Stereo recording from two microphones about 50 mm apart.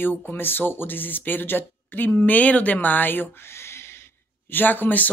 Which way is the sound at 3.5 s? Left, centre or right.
Left.